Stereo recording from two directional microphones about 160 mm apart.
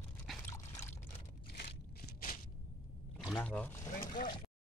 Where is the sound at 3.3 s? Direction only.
10° left (ahead or behind).